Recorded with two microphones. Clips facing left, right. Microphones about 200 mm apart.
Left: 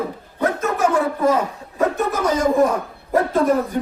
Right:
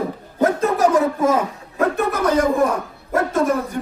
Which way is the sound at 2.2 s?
60° right (ahead or behind).